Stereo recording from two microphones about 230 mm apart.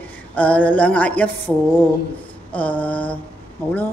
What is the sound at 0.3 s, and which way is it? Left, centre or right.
Speech, centre.